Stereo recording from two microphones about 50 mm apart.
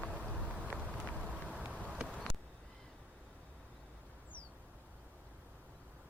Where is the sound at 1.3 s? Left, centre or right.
Right.